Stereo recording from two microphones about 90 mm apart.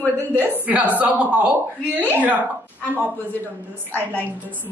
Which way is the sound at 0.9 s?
15° right (ahead or behind).